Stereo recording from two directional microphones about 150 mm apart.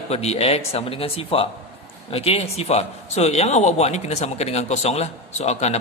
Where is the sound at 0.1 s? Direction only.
45° left (ahead or behind).